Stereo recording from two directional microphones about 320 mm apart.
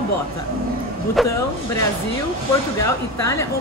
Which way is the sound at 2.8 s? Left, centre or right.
Centre.